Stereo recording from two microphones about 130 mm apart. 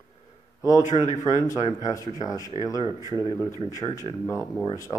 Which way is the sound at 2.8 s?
30° right (ahead or behind).